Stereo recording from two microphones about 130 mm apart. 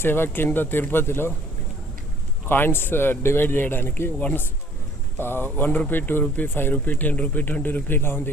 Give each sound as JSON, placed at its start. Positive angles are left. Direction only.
{"t": 0.0, "sound": "speech", "side_deg": 15}
{"t": 2.5, "sound": "speech", "side_deg": 15}